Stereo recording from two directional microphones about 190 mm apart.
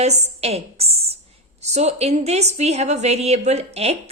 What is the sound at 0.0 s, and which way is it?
A woman's voice, 35° right (ahead or behind).